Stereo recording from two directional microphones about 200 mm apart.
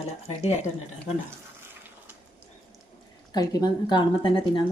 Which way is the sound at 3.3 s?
20° left (ahead or behind).